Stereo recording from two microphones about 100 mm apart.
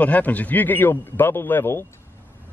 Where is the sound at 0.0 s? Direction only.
15° left (ahead or behind).